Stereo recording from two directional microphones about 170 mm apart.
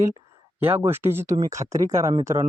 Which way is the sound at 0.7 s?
15° right (ahead or behind).